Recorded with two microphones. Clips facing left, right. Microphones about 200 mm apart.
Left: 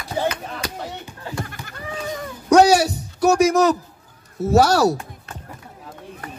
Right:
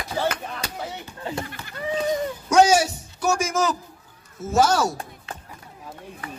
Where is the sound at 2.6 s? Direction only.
35° left (ahead or behind).